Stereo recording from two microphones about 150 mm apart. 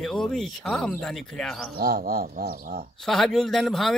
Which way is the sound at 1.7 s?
85° right.